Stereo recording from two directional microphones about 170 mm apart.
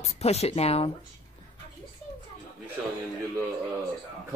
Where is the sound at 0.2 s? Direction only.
40° left (ahead or behind).